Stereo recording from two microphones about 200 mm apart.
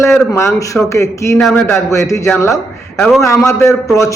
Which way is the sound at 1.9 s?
15° left (ahead or behind).